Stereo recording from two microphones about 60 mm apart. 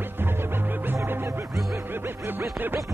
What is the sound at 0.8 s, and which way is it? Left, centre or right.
Music, right.